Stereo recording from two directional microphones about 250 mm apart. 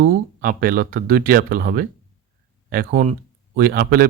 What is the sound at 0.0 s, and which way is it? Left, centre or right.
Speech, right.